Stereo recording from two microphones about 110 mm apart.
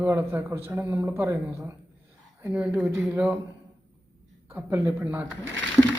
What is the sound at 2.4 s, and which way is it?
Speech, 10° right (ahead or behind).